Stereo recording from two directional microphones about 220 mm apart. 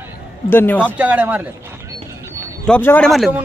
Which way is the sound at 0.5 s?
10° left (ahead or behind).